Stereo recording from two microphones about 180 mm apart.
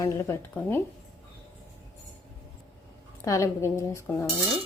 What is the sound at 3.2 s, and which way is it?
Speech, 15° left (ahead or behind).